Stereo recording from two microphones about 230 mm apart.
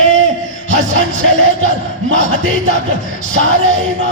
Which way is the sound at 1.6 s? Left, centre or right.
Right.